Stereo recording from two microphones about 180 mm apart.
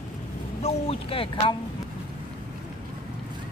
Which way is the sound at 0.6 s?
30° left (ahead or behind).